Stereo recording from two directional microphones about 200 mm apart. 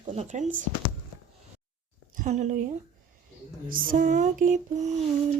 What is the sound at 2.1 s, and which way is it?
Speech, 35° right (ahead or behind).